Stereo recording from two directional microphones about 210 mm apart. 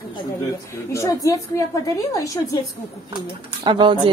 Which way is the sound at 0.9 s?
15° left (ahead or behind).